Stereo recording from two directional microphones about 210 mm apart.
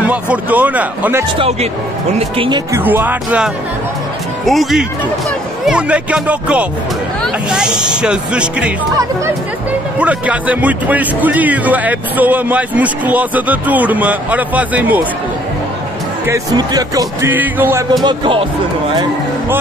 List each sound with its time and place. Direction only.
0.0 s speech: 5° right (ahead or behind)
2.1 s speech: 25° right (ahead or behind)
2.7 s speech: 10° right (ahead or behind)
16.3 s speech: 15° right (ahead or behind)
18.0 s speech: 20° right (ahead or behind)